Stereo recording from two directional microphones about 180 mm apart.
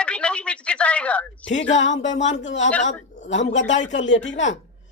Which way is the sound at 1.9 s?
40° left (ahead or behind).